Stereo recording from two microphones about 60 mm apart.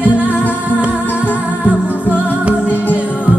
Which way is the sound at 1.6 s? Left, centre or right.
Right.